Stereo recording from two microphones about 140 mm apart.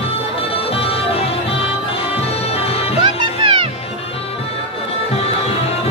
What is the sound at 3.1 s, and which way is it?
Music, 35° right (ahead or behind).